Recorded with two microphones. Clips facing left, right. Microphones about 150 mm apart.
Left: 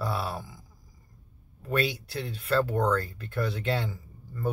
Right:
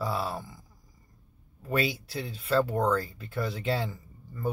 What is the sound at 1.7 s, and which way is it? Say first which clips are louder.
Speech: left 1 dB; 5° right (ahead or behind).